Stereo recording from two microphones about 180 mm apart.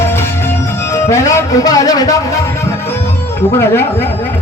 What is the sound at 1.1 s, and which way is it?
A man's voice, 20° left (ahead or behind).